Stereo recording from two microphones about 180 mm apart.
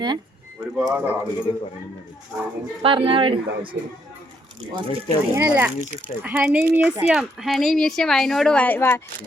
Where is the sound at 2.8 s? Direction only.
30° right (ahead or behind).